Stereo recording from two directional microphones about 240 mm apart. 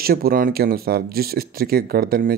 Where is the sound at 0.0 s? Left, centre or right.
Right.